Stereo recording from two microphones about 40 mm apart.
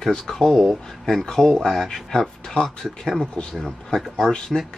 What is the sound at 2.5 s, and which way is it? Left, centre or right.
Speech, centre.